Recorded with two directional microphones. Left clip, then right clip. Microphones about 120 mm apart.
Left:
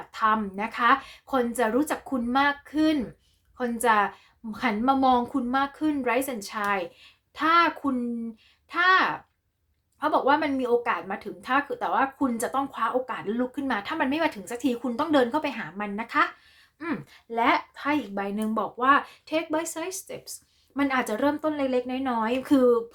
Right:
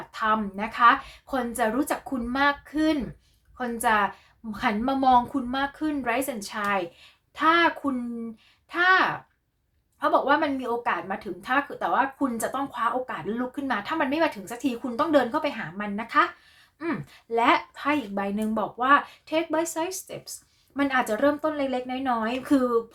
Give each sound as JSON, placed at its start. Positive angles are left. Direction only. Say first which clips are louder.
{"t": 0.1, "sound": "a woman's voice", "louder": "left 1 dB", "side_deg": 35}
{"t": 16.7, "sound": "a woman's voice", "louder": "right 2 dB", "side_deg": 25}